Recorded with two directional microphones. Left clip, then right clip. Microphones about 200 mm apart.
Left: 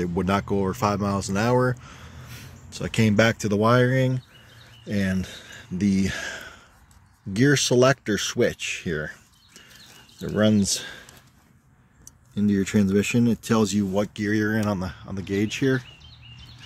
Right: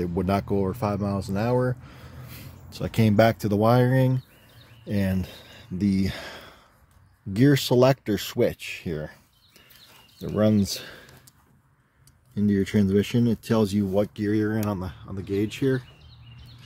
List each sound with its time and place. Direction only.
0.0 s speech: centre (ahead or behind)
1.9 s speech: 10° right (ahead or behind)
12.4 s speech: 10° right (ahead or behind)
14.6 s speech: 15° left (ahead or behind)